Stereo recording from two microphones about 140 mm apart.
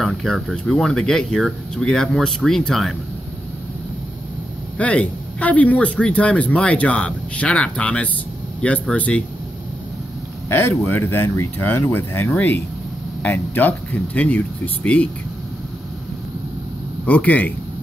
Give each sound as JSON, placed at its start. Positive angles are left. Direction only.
{"t": 0.0, "sound": "speech", "side_deg": 0}
{"t": 4.7, "sound": "speech", "side_deg": 10}
{"t": 10.8, "sound": "speech", "side_deg": 15}
{"t": 17.0, "sound": "speech", "side_deg": 10}